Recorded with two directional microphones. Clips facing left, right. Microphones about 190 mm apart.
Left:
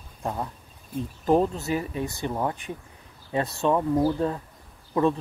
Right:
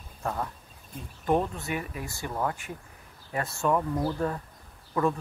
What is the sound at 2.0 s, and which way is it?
Speech, 20° left (ahead or behind).